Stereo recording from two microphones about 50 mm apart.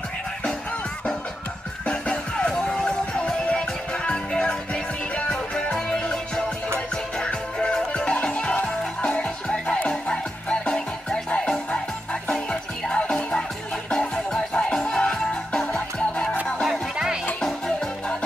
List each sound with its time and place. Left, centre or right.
1.9 s music: centre
8.1 s music: left
9.8 s music: left